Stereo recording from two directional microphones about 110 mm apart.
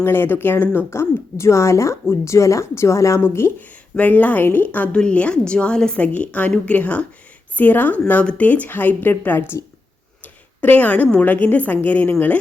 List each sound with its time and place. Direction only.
0.0 s a woman's voice: 20° left (ahead or behind)
10.6 s a woman's voice: 15° left (ahead or behind)